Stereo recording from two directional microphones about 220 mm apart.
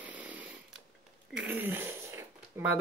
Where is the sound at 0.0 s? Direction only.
5° right (ahead or behind).